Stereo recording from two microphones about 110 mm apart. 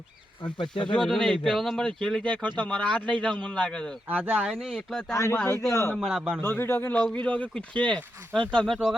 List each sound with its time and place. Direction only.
0.4 s speech: 45° left (ahead or behind)
0.9 s a man's voice: 5° left (ahead or behind)
4.1 s a man's voice: 10° right (ahead or behind)
5.1 s speech: 25° left (ahead or behind)
6.0 s a man's voice: 5° right (ahead or behind)
6.4 s speech: 20° left (ahead or behind); by 9.0 s centre (ahead or behind)